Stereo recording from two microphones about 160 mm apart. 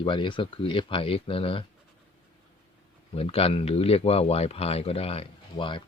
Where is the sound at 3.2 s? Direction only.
35° left (ahead or behind).